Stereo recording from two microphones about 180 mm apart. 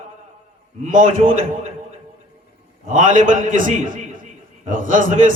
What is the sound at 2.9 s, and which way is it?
A man's voice, 45° right (ahead or behind).